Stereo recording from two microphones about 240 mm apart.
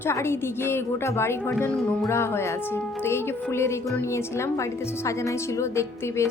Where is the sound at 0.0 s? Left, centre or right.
Centre.